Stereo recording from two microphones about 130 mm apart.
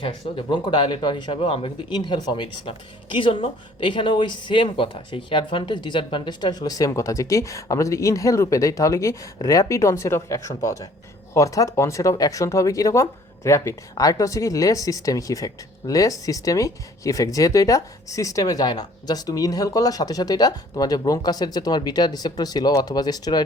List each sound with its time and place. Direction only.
0.0 s speech: 40° left (ahead or behind)